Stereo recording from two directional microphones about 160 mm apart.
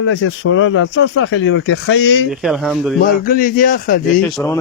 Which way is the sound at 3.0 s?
65° left (ahead or behind).